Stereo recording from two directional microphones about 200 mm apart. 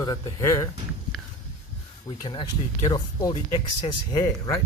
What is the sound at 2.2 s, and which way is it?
Speech, 25° left (ahead or behind).